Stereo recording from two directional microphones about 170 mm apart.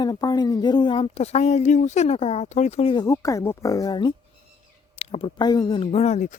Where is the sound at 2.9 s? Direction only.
20° left (ahead or behind).